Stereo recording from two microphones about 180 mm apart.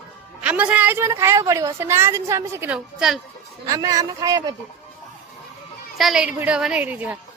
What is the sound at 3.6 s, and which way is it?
Speech, 20° right (ahead or behind).